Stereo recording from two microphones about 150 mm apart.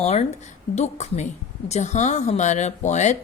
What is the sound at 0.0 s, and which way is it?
A woman's voice, 45° left (ahead or behind).